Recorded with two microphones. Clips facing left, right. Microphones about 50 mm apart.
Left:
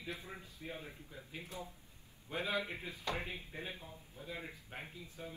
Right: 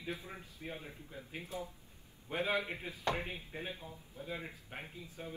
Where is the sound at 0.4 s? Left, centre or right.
Right.